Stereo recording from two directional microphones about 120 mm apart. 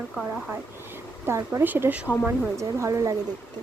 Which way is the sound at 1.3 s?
20° right (ahead or behind).